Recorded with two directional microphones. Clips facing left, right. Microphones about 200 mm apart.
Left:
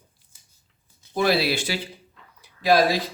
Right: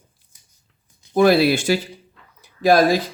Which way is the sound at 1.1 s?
50° right (ahead or behind).